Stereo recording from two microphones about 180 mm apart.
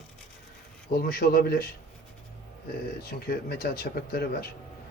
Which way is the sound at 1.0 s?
60° left (ahead or behind).